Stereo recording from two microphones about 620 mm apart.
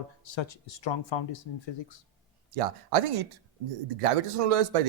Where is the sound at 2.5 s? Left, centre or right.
Right.